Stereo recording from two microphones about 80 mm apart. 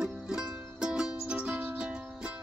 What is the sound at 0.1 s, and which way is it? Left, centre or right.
Music, centre.